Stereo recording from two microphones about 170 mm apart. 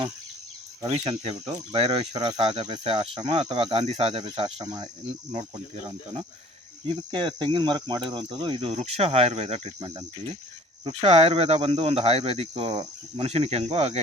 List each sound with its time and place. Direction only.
0.9 s speech: 30° right (ahead or behind)
5.3 s speech: 40° right (ahead or behind)
6.8 s cricket: 25° right (ahead or behind)
8.1 s speech: 30° right (ahead or behind)